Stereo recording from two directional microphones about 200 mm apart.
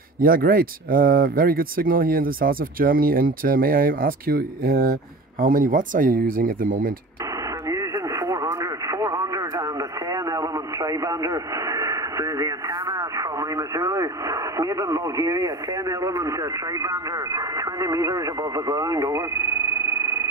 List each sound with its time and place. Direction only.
0.2 s speech: 45° right (ahead or behind)
7.6 s radio: 15° right (ahead or behind)